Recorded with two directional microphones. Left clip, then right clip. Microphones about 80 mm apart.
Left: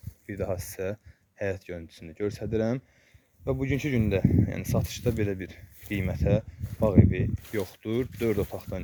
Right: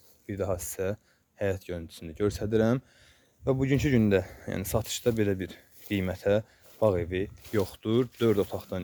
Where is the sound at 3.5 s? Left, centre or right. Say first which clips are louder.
Right 2 dB; right.